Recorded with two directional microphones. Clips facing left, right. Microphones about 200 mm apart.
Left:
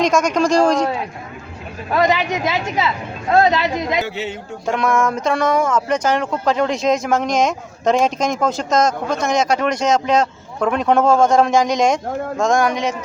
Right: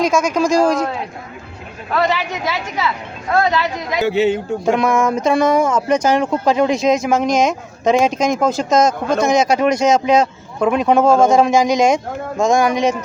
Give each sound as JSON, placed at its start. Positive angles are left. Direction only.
{"t": 0.0, "sound": "speech", "side_deg": -5}
{"t": 1.9, "sound": "speech", "side_deg": 15}
{"t": 4.0, "sound": "a man's voice", "side_deg": -65}
{"t": 4.6, "sound": "speech", "side_deg": -10}